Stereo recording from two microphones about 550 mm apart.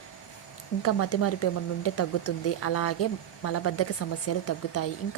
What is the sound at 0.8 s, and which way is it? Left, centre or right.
Speech, left.